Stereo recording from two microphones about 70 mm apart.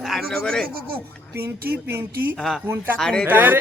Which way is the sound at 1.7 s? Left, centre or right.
Right.